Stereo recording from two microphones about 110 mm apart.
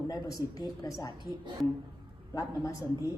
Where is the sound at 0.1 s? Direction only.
35° left (ahead or behind).